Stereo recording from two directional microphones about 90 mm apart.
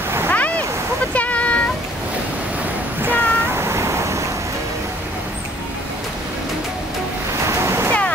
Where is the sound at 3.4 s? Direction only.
30° right (ahead or behind).